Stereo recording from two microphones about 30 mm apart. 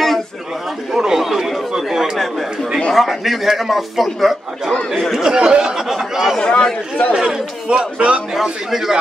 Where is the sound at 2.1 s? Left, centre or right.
Centre.